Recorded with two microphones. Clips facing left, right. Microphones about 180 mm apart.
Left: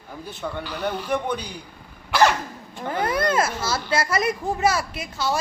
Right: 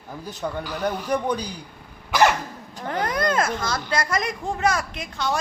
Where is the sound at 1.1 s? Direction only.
35° right (ahead or behind).